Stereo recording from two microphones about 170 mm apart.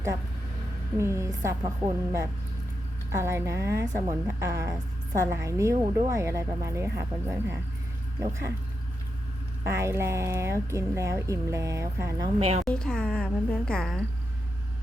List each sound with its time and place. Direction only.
0.9 s a woman's voice: 15° right (ahead or behind)
3.1 s a woman's voice: 15° right (ahead or behind)
9.6 s a woman's voice: 15° right (ahead or behind)
12.4 s a woman's voice: 40° right (ahead or behind)
12.6 s a woman's voice: 5° left (ahead or behind)